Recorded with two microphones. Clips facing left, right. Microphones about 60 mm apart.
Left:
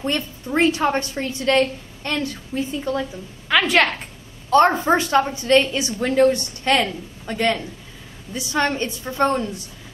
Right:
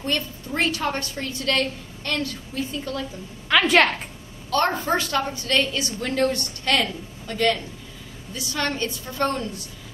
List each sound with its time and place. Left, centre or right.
0.0 s a woman's voice: left
3.4 s a woman's voice: centre
4.5 s a woman's voice: left